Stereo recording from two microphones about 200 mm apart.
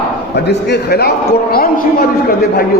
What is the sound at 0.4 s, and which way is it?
A man's voice, 55° left (ahead or behind).